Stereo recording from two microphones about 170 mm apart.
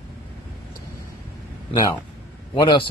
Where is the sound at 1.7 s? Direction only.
20° left (ahead or behind).